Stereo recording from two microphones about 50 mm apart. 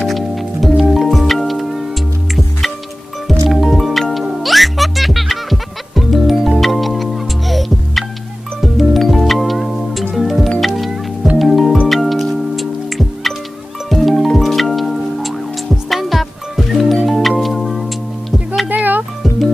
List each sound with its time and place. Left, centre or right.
0.0 s music: centre
3.3 s music: centre
18.8 s music: right